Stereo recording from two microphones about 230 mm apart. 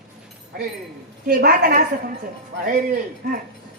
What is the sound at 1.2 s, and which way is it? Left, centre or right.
Speech, right.